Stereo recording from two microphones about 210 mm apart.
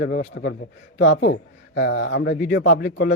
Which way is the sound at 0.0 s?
55° left (ahead or behind).